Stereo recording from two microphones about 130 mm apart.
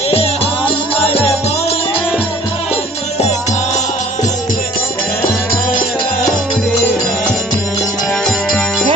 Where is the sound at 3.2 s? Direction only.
60° left (ahead or behind).